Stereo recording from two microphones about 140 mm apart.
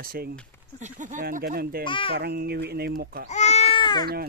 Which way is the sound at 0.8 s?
65° right (ahead or behind).